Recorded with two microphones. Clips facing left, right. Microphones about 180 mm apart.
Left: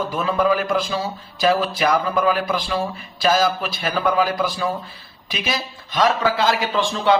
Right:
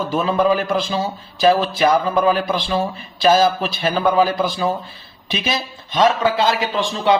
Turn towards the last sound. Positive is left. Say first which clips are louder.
# right 1 dB
turn(degrees=-20)  # may be behind; listen again after turning